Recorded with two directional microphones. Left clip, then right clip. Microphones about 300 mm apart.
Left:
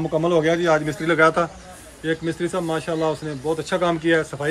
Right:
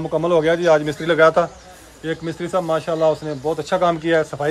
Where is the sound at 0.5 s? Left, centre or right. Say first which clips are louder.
Right 4 dB; right.